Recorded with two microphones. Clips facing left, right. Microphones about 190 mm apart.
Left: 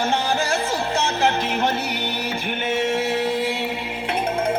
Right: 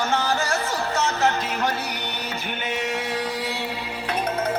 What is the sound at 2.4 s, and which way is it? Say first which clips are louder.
Music: left 5 dB; 50° left (ahead or behind).